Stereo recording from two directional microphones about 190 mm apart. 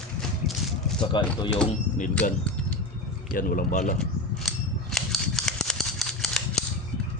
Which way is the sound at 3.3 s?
45° left (ahead or behind).